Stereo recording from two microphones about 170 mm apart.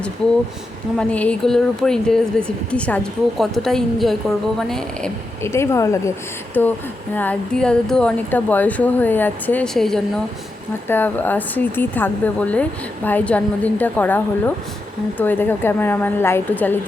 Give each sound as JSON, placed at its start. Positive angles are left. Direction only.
{"t": 0.9, "sound": "speech", "side_deg": 5}
{"t": 5.4, "sound": "speech", "side_deg": 15}